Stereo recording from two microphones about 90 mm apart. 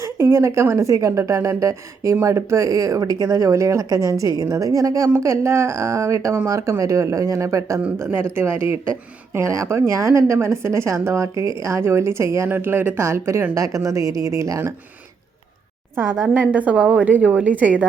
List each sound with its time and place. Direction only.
0.0 s speech: 30° right (ahead or behind)
16.0 s a woman's voice: 15° right (ahead or behind)